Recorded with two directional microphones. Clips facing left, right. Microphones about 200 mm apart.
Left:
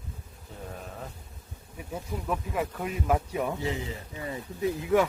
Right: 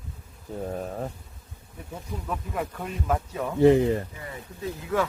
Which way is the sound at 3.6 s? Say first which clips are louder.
Right 15 dB; 60° right (ahead or behind).